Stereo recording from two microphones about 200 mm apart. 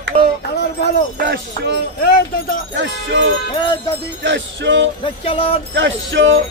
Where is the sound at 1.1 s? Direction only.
55° right (ahead or behind).